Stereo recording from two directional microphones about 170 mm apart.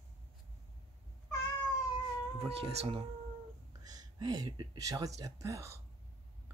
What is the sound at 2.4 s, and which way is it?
Speech, 35° right (ahead or behind).